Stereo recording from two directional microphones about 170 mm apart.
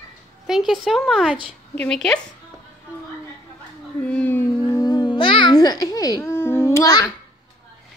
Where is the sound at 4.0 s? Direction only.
5° left (ahead or behind).